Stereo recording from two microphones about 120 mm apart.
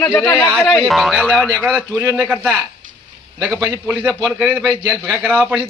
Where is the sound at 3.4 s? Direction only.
Centre (ahead or behind).